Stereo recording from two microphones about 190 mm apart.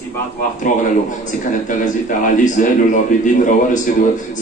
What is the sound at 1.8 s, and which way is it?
Speech, 40° left (ahead or behind).